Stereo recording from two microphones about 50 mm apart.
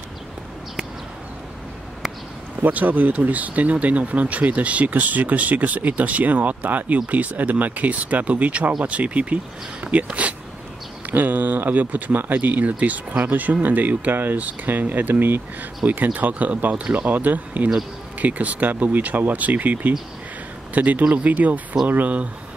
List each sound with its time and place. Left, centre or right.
2.6 s speech: right
11.1 s speech: right